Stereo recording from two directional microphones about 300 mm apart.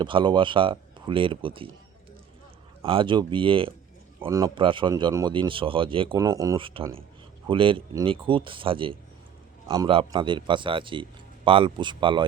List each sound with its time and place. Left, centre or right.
0.0 s speech: centre
2.8 s speech: centre